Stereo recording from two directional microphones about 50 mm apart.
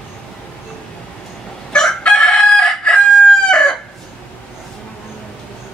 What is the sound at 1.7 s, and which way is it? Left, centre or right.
Chicken, centre.